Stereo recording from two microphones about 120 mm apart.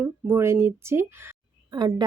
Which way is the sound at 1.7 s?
35° right (ahead or behind).